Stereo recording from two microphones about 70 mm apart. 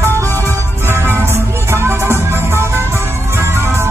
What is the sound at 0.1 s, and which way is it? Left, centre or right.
Music, left.